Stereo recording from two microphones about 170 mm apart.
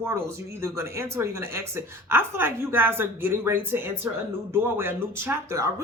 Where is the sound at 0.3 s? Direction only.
15° right (ahead or behind).